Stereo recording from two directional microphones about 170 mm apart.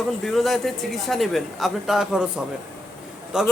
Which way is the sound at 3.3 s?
5° right (ahead or behind).